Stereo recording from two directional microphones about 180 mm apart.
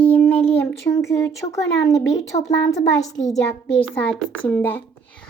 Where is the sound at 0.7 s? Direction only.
15° left (ahead or behind).